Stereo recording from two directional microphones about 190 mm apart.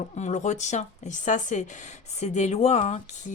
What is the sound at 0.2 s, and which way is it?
Speech, 40° left (ahead or behind).